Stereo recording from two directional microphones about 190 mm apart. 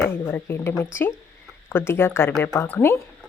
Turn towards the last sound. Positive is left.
turn(degrees=10)  # may be behind; listen again after turning